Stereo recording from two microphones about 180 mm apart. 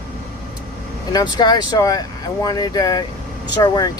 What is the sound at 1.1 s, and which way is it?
Speech, 20° left (ahead or behind).